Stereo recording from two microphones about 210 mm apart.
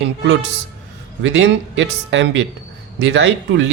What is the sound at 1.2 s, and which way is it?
A man's voice, 60° right (ahead or behind).